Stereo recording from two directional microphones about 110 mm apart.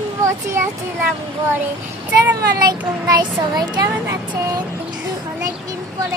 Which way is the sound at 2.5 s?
35° right (ahead or behind).